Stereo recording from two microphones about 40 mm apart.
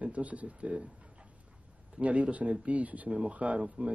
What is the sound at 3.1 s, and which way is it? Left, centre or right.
Speech, right.